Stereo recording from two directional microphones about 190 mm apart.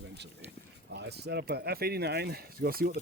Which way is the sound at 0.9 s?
60° right (ahead or behind).